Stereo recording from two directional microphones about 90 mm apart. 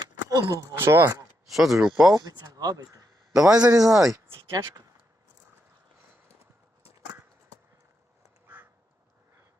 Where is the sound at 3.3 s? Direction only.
5° right (ahead or behind).